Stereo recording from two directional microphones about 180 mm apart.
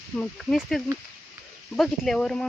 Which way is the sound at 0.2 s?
Centre (ahead or behind).